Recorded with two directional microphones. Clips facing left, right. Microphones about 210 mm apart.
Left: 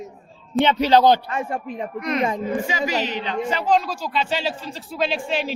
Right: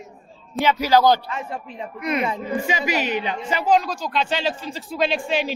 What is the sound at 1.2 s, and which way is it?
Speech, 50° left (ahead or behind).